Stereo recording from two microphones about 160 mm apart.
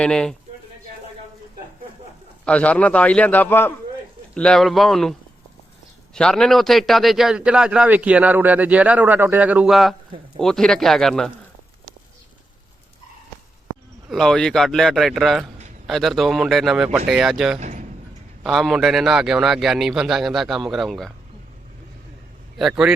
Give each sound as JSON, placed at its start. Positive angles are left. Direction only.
{"t": 0.0, "sound": "a man's voice", "side_deg": 5}
{"t": 2.4, "sound": "a man's voice", "side_deg": 10}
{"t": 6.1, "sound": "a man's voice", "side_deg": 5}
{"t": 14.1, "sound": "a man's voice", "side_deg": 5}
{"t": 17.6, "sound": "a sound", "side_deg": -50}
{"t": 18.4, "sound": "a man's voice", "side_deg": 0}
{"t": 22.5, "sound": "a man's voice", "side_deg": -5}